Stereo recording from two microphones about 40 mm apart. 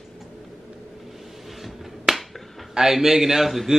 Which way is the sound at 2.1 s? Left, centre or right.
Centre.